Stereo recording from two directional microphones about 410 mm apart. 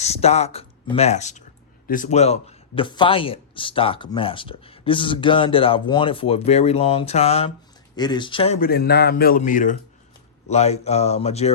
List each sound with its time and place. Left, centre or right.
0.0 s a man's voice: centre